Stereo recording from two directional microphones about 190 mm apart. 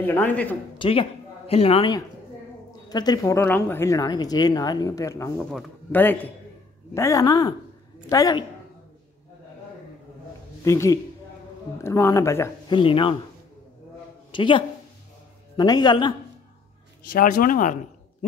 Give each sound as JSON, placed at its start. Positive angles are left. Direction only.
{"t": 0.0, "sound": "speech", "side_deg": 10}
{"t": 0.7, "sound": "a woman's voice", "side_deg": 30}
{"t": 5.5, "sound": "a man's voice", "side_deg": 5}
{"t": 10.6, "sound": "a woman's voice", "side_deg": 15}
{"t": 12.7, "sound": "a man's voice", "side_deg": 25}
{"t": 14.3, "sound": "a man's voice", "side_deg": 25}
{"t": 17.1, "sound": "speech", "side_deg": 45}